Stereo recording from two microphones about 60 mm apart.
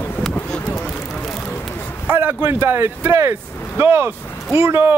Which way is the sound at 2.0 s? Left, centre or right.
Right.